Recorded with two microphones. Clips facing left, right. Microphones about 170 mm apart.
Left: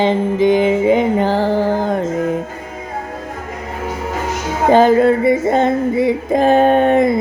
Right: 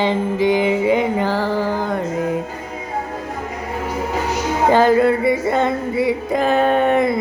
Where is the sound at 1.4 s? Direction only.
50° left (ahead or behind).